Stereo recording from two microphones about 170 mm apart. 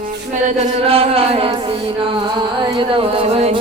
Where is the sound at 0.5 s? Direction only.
35° right (ahead or behind).